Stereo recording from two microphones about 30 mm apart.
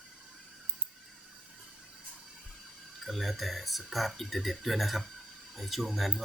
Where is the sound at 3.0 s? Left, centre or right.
Centre.